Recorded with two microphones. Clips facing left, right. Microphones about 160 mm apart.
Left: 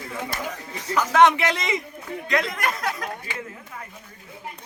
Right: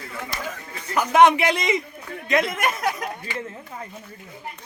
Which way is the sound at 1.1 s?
15° right (ahead or behind).